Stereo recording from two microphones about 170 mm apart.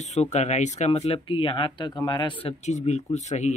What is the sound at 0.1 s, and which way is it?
Speech, 45° left (ahead or behind).